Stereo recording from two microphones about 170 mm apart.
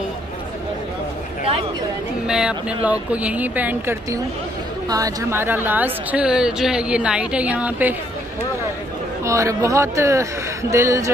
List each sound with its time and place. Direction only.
2.2 s a woman's voice: 5° right (ahead or behind)
9.2 s a woman's voice: 15° right (ahead or behind)